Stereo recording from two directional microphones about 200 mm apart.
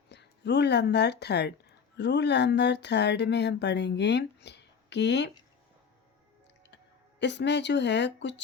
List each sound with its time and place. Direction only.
0.1 s speech: 60° left (ahead or behind)
7.2 s speech: 60° left (ahead or behind)